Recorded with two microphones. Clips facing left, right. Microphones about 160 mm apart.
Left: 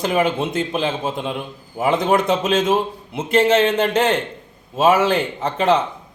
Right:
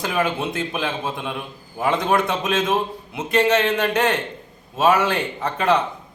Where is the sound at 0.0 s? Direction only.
20° left (ahead or behind).